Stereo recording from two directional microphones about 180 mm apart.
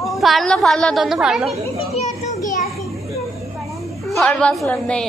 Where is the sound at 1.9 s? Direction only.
40° left (ahead or behind).